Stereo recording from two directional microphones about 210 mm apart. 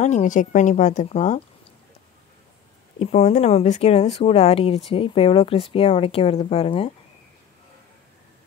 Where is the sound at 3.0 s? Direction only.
30° left (ahead or behind).